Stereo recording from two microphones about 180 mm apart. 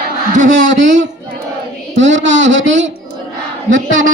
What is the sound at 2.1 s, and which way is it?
Speech, 90° right.